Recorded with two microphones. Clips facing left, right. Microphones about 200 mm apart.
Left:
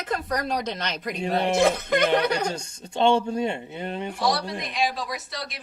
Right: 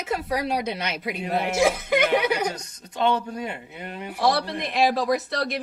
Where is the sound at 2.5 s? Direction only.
30° left (ahead or behind).